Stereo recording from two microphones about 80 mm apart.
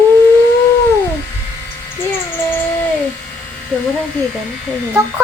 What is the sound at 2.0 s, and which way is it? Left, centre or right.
Speech, left.